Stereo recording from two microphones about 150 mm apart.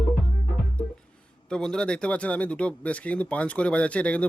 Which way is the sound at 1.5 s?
5° left (ahead or behind).